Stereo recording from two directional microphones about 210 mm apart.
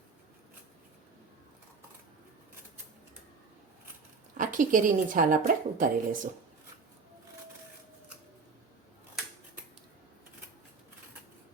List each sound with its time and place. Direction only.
4.4 s a woman's voice: 40° right (ahead or behind)